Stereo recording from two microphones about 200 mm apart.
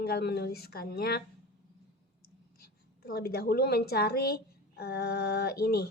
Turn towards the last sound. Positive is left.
turn(degrees=50)  # may be behind; listen again after turning